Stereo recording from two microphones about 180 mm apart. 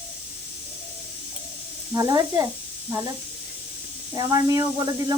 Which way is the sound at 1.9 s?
20° right (ahead or behind).